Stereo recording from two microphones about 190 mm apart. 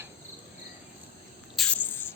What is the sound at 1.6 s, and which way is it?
Spray, 5° left (ahead or behind).